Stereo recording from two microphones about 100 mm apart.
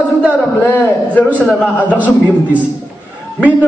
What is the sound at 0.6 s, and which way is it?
Speech, 20° left (ahead or behind).